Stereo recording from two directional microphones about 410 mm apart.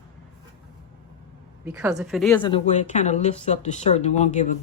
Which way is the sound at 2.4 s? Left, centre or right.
Centre.